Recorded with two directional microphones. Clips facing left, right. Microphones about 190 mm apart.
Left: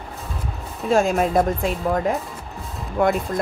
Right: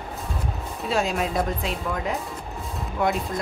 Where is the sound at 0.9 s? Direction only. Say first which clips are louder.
Left 7 dB; 45° left (ahead or behind).